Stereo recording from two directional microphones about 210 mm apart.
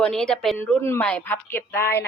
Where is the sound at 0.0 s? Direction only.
Centre (ahead or behind).